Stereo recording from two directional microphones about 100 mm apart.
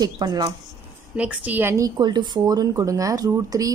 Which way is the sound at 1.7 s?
40° right (ahead or behind).